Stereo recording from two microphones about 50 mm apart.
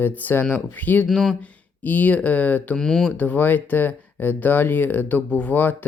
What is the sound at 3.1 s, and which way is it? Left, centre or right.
Speech, left.